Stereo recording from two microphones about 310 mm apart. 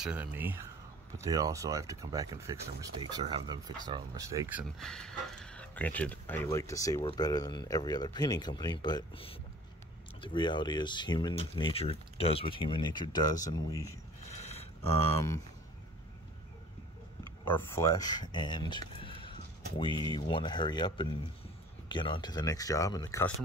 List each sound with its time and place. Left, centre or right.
0.0 s speech: centre
14.4 s a sound: centre
15.1 s speech: centre
17.5 s speech: centre